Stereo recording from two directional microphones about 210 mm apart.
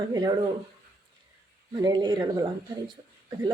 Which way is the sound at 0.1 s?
15° right (ahead or behind).